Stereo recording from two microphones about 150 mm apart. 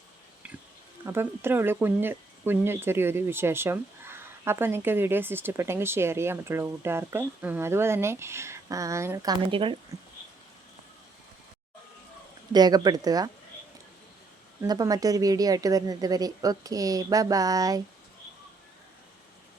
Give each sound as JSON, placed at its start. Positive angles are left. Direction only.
{"t": 1.0, "sound": "speech", "side_deg": -15}
{"t": 12.5, "sound": "a woman's voice", "side_deg": -25}
{"t": 14.7, "sound": "a woman's voice", "side_deg": -25}